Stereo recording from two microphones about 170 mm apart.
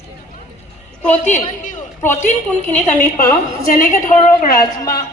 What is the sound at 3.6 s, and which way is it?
Speech, 55° left (ahead or behind).